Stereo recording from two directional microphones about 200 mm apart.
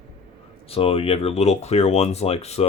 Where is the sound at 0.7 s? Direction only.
30° left (ahead or behind).